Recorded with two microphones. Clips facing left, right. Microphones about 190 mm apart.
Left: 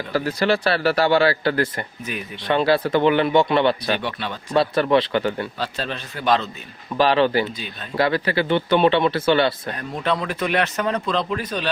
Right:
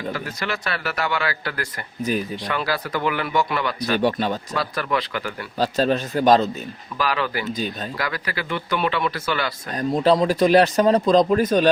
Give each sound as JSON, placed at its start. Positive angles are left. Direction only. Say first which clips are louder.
{"t": 0.1, "sound": "a man's voice", "louder": "left 8 dB", "side_deg": 35}
{"t": 2.1, "sound": "speech", "louder": "right 9 dB", "side_deg": -35}
{"t": 2.5, "sound": "speech", "louder": "left 9 dB", "side_deg": 25}
{"t": 3.9, "sound": "speech", "louder": "right 6 dB", "side_deg": -40}
{"t": 4.5, "sound": "speech", "louder": "left 7 dB", "side_deg": 30}
{"t": 5.5, "sound": "speech", "louder": "right 8 dB", "side_deg": -40}
{"t": 6.9, "sound": "speech", "louder": "left 7 dB", "side_deg": 30}
{"t": 9.7, "sound": "speech", "louder": "right 6 dB", "side_deg": -35}